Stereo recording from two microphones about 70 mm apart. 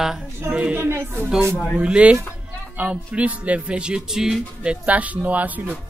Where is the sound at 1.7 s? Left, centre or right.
Centre.